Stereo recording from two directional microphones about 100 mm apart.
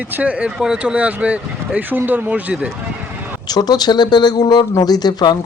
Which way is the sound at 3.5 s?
45° left (ahead or behind).